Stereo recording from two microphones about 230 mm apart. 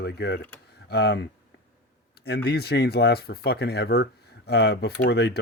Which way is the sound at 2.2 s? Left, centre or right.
Left.